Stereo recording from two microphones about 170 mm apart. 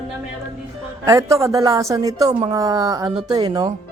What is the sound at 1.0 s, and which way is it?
A woman's voice, 20° right (ahead or behind).